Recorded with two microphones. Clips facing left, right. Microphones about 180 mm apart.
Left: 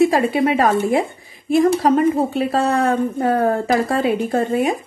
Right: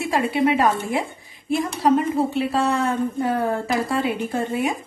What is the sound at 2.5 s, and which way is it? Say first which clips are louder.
A woman's voice: left 4 dB; 50° left (ahead or behind).